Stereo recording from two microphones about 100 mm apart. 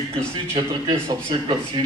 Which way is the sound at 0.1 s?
10° left (ahead or behind).